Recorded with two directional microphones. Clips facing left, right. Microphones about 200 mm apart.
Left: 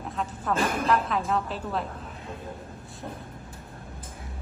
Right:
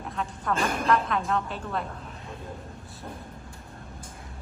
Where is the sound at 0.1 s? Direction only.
Centre (ahead or behind).